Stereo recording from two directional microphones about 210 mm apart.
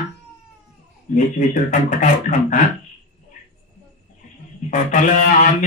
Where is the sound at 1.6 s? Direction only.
35° left (ahead or behind).